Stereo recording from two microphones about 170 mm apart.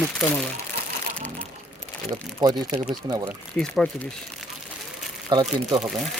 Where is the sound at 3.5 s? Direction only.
5° left (ahead or behind).